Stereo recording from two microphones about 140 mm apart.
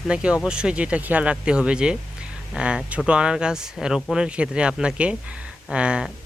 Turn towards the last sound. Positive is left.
turn(degrees=-5)  # may be behind; listen again after turning